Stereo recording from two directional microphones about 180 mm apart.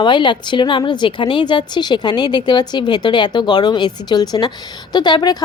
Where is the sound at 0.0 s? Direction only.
25° left (ahead or behind).